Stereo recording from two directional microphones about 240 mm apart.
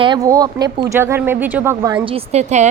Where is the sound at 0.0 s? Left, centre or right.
Centre.